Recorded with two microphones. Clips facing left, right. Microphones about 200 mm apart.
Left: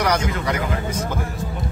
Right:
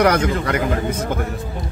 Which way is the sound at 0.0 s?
55° right (ahead or behind).